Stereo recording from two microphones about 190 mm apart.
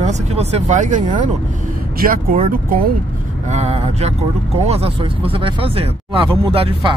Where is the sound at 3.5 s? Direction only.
35° right (ahead or behind).